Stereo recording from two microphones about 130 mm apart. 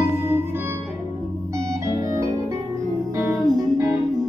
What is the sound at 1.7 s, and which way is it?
Organ, 25° right (ahead or behind).